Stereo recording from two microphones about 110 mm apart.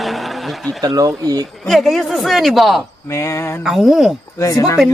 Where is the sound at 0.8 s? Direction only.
35° right (ahead or behind).